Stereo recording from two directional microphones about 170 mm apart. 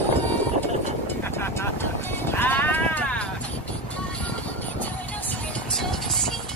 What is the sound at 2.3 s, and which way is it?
Sheep, 10° left (ahead or behind).